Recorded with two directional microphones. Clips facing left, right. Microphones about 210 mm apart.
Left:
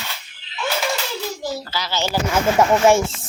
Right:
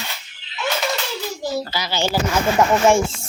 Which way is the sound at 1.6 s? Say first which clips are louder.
Right 2 dB; 15° right (ahead or behind).